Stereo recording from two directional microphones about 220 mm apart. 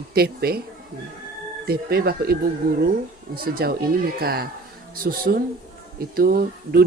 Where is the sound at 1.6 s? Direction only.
45° right (ahead or behind).